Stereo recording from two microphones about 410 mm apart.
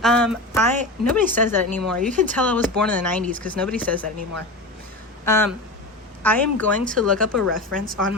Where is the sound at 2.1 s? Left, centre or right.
Centre.